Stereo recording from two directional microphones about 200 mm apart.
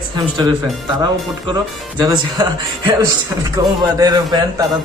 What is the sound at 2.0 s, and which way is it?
A man's voice, 20° right (ahead or behind).